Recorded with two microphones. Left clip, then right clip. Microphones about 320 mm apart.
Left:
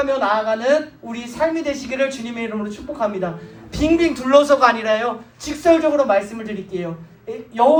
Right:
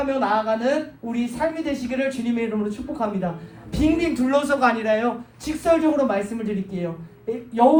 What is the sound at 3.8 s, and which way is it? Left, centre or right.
A man's voice, left.